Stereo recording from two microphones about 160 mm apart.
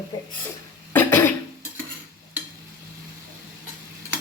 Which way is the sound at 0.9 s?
15° left (ahead or behind).